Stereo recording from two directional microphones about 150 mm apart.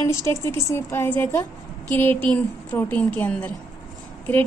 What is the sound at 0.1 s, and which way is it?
A woman's voice, 20° left (ahead or behind).